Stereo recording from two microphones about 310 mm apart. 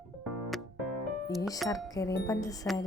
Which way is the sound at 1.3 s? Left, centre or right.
Centre.